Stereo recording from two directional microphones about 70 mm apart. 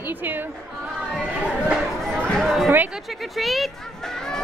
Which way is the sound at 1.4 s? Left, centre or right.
Centre.